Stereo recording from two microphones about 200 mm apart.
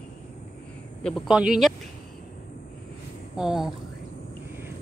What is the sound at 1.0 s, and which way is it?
Speech, centre (ahead or behind).